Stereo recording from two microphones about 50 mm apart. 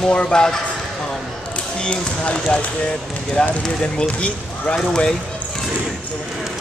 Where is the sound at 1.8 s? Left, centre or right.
Centre.